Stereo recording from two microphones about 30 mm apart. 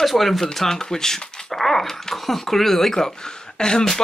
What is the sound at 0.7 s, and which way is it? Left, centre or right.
Speech, centre.